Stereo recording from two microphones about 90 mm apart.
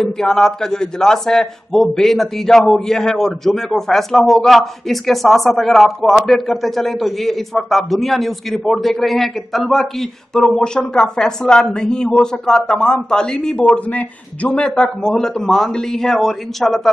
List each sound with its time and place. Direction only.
0.0 s a man's voice: 5° left (ahead or behind)